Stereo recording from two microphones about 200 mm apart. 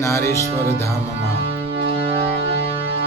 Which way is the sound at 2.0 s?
25° right (ahead or behind).